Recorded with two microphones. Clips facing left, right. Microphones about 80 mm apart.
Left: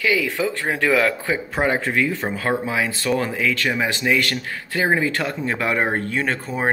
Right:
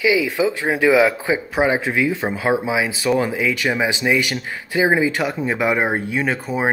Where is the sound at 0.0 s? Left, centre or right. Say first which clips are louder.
Right 4 dB; centre.